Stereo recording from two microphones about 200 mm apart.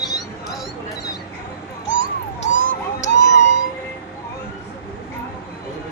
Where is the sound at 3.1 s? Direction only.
60° left (ahead or behind).